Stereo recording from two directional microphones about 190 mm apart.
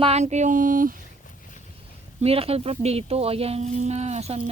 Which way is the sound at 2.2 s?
30° right (ahead or behind).